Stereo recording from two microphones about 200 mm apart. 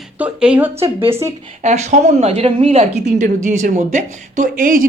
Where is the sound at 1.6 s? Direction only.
35° right (ahead or behind).